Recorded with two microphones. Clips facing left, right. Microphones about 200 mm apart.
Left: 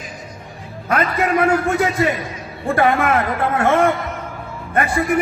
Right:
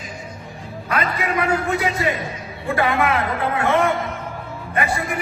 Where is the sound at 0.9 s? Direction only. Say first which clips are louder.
Left 5 dB; 50° left (ahead or behind).